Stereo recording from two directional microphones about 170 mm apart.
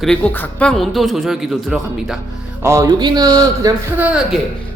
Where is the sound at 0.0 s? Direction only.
5° left (ahead or behind).